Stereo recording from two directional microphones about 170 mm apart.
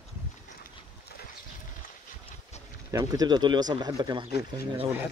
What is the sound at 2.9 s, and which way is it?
Speech, 20° right (ahead or behind).